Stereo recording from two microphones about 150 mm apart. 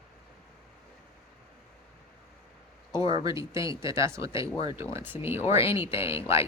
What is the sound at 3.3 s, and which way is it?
Speech, 20° right (ahead or behind).